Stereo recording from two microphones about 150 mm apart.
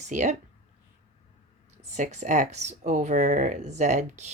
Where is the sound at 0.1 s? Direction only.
55° right (ahead or behind).